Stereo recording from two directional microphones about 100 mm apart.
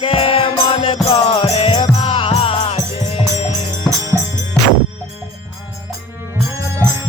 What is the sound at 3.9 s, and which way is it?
Music, 5° left (ahead or behind).